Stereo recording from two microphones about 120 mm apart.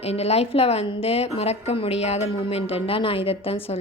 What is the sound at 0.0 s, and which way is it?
A woman's voice, 60° left (ahead or behind).